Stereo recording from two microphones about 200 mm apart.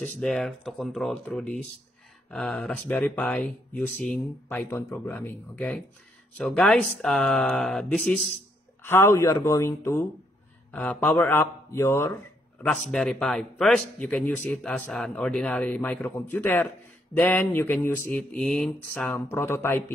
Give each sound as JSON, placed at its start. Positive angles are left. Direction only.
{"t": 0.0, "sound": "speech", "side_deg": 0}